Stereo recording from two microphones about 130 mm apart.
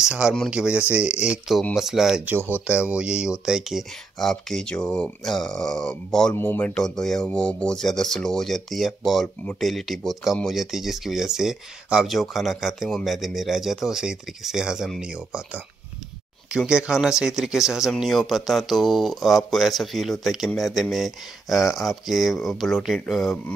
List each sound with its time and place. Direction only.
0.0 s speech: 5° right (ahead or behind)
6.3 s speech: 15° left (ahead or behind)